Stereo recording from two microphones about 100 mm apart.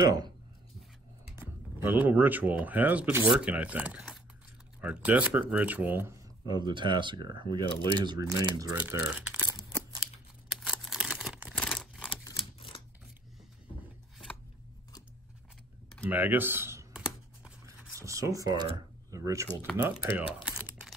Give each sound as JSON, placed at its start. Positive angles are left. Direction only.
{"t": 0.0, "sound": "speech", "side_deg": -40}
{"t": 1.3, "sound": "speech", "side_deg": -20}
{"t": 6.4, "sound": "speech", "side_deg": -45}
{"t": 8.2, "sound": "speech", "side_deg": -35}
{"t": 8.7, "sound": "speech", "side_deg": -15}
{"t": 10.5, "sound": "a sound", "side_deg": -5}
{"t": 11.7, "sound": "crumpling", "side_deg": -5}
{"t": 12.4, "sound": "typewriter", "side_deg": 60}
{"t": 16.1, "sound": "speech", "side_deg": -20}
{"t": 16.9, "sound": "computer keyboard", "side_deg": -10}
{"t": 17.9, "sound": "speech", "side_deg": -30}
{"t": 19.8, "sound": "speech", "side_deg": -20}